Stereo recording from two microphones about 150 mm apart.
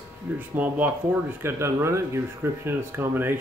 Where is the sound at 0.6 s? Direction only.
10° right (ahead or behind).